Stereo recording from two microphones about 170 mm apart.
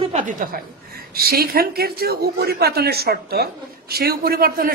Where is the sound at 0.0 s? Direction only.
45° right (ahead or behind).